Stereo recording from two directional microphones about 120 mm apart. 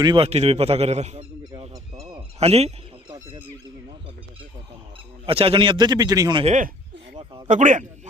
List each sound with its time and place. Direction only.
0.0 s a man's voice: 40° right (ahead or behind)
0.3 s speech: 60° right (ahead or behind)
1.7 s a sound: 30° right (ahead or behind)
2.4 s speech: 60° right (ahead or behind)
5.2 s a man's voice: 50° right (ahead or behind); by 6.3 s 30° right (ahead or behind)
6.4 s speech: 80° right